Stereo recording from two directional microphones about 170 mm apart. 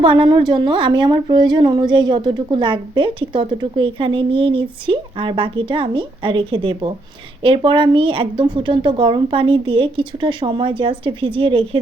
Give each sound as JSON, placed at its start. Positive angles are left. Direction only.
{"t": 0.0, "sound": "a woman's voice", "side_deg": -30}